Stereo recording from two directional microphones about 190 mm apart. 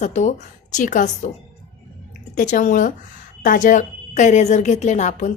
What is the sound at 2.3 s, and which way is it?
A woman's voice, 40° left (ahead or behind).